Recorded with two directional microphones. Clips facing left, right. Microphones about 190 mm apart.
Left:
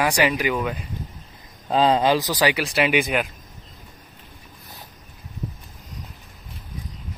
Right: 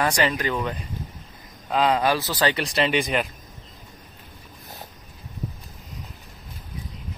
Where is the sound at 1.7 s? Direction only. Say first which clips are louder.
Left 3 dB; 30° left (ahead or behind).